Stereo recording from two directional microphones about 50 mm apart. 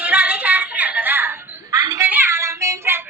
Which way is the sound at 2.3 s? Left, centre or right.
Right.